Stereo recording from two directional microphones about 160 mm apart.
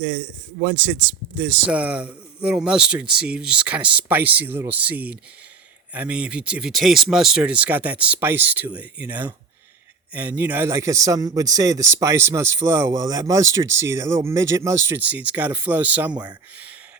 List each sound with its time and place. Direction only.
0.8 s a man's voice: 5° right (ahead or behind)